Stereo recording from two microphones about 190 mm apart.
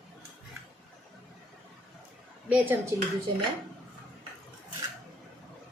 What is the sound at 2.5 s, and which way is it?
Speech, 10° right (ahead or behind).